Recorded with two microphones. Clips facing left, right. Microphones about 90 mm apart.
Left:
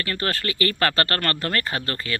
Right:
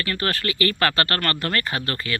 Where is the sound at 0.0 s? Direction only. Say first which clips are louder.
Right 1 dB; 30° left (ahead or behind).